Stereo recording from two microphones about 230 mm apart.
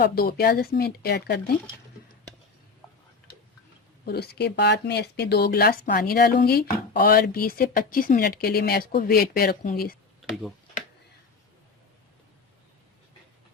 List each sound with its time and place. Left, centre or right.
0.0 s speech: left
4.0 s speech: left
10.2 s tick-tock: centre